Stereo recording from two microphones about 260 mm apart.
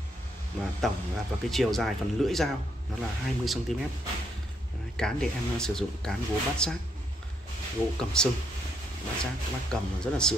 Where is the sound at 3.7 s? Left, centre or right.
Centre.